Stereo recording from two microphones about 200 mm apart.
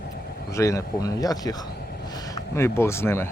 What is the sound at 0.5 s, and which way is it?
Speech, 15° left (ahead or behind).